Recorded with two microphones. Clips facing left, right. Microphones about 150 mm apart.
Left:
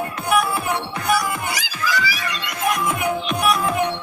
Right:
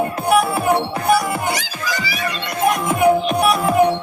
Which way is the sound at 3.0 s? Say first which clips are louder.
Right 7 dB; 30° right (ahead or behind).